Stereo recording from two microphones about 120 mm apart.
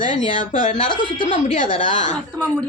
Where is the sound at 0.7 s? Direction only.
50° left (ahead or behind).